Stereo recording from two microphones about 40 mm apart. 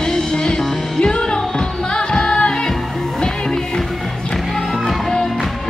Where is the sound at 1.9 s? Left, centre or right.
Left.